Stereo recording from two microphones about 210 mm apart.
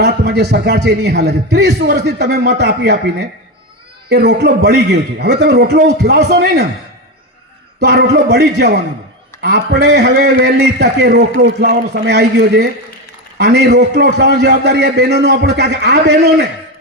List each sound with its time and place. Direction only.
0.0 s a man's voice: 50° right (ahead or behind)
7.8 s a man's voice: 50° right (ahead or behind)